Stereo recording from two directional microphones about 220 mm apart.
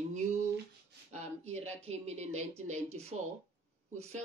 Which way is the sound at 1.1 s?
30° right (ahead or behind).